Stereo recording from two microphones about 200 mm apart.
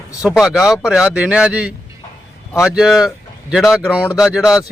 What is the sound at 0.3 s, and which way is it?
Speech, centre (ahead or behind).